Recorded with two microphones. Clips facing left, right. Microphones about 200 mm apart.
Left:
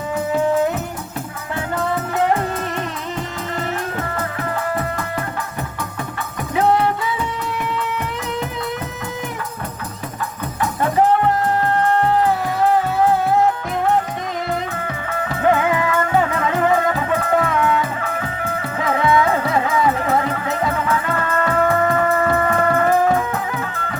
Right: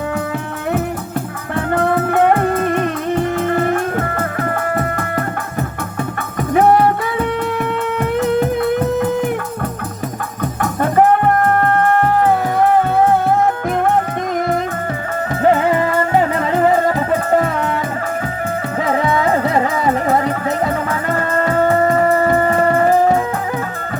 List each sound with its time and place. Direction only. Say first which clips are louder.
1.5 s music: right 6 dB; 55° right (ahead or behind)
4.8 s music: right 4 dB; 55° right (ahead or behind)
6.5 s music: right 5 dB; 50° right (ahead or behind)
8.2 s music: right 13 dB; 55° right (ahead or behind)
10.6 s music: right 3 dB; 55° right (ahead or behind)
15.4 s music: right 3 dB; 35° right (ahead or behind)
18.9 s music: even; 40° right (ahead or behind)